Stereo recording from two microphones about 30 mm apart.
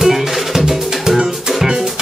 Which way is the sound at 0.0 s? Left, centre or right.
Centre.